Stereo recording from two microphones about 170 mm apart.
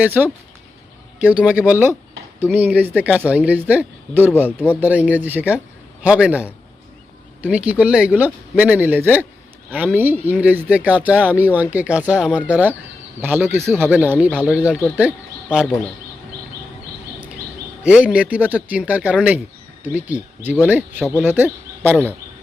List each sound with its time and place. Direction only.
0.0 s speech: 10° right (ahead or behind)
17.8 s speech: 5° right (ahead or behind)